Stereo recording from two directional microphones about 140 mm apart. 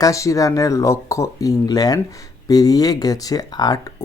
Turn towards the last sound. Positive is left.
turn(degrees=30)  # may be behind; listen again after turning